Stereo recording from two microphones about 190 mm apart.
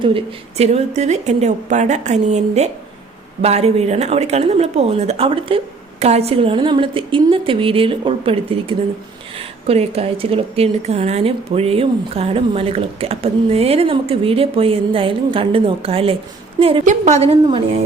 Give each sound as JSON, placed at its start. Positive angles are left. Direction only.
{"t": 0.0, "sound": "a woman's voice", "side_deg": -30}